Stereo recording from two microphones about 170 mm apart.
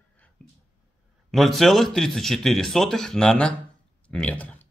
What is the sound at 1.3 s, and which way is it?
A man's voice, centre (ahead or behind).